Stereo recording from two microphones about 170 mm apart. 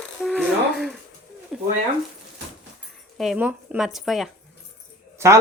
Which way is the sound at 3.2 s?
5° right (ahead or behind).